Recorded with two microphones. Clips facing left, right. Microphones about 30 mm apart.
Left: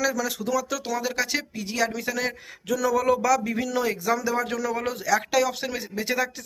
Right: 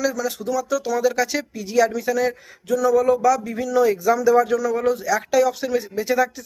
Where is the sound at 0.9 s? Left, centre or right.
Left.